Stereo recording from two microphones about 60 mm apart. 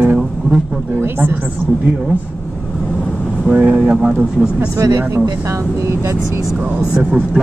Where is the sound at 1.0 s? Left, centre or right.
Right.